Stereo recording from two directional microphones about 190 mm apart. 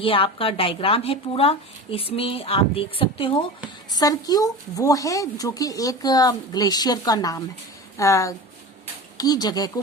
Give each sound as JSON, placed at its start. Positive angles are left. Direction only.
{"t": 0.0, "sound": "a woman's voice", "side_deg": 30}